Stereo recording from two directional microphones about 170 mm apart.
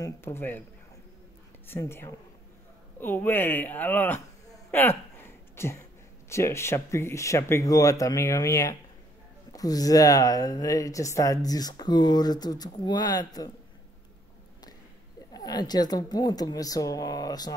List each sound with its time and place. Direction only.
0.0 s speech: 15° left (ahead or behind)
1.7 s speech: 15° left (ahead or behind)
15.3 s speech: 25° left (ahead or behind)